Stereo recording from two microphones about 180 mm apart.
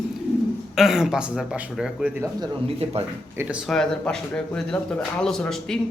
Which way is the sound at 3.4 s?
5° right (ahead or behind).